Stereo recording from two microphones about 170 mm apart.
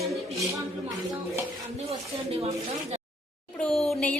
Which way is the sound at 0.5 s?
20° right (ahead or behind).